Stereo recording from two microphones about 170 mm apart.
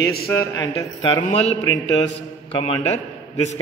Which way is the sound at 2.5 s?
35° left (ahead or behind).